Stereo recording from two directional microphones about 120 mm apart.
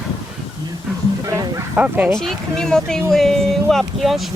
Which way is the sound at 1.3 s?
25° right (ahead or behind).